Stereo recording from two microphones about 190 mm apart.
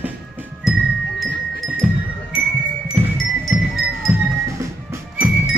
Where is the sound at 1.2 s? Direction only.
Centre (ahead or behind).